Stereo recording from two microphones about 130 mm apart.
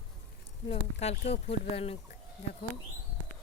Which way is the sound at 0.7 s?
55° left (ahead or behind).